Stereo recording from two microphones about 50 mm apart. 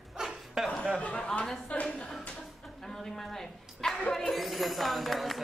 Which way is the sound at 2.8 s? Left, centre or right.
Centre.